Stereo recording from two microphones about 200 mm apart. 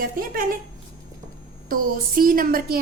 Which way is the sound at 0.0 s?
45° right (ahead or behind).